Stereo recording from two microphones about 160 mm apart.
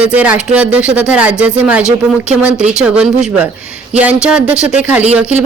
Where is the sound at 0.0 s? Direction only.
10° right (ahead or behind).